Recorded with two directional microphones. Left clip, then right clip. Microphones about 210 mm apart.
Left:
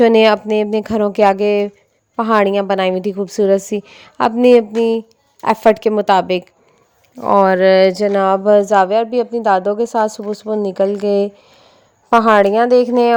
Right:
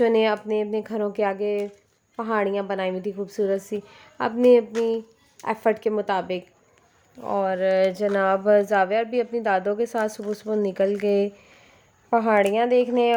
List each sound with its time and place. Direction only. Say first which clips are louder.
0.0 s a woman's voice: left 10 dB; 40° left (ahead or behind); by 10.2 s 25° left (ahead or behind)
10.8 s speech: left 8 dB; centre (ahead or behind)
12.1 s a woman's voice: left 9 dB; 35° left (ahead or behind)
12.5 s speech: left 9 dB; 10° left (ahead or behind)
12.8 s a woman's voice: left 8 dB; 35° left (ahead or behind)